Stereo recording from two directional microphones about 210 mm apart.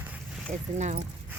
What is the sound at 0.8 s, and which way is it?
Speech, 35° right (ahead or behind).